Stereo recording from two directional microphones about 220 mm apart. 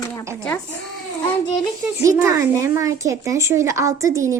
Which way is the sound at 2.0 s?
15° right (ahead or behind).